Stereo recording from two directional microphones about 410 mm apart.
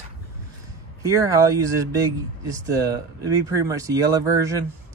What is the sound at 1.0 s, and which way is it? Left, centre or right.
Speech, centre.